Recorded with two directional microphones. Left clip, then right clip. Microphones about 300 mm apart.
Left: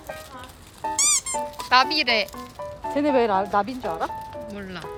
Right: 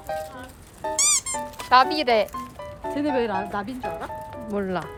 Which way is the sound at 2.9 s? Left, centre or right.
Centre.